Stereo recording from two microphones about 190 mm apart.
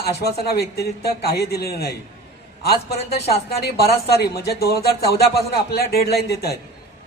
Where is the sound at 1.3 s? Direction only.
55° left (ahead or behind).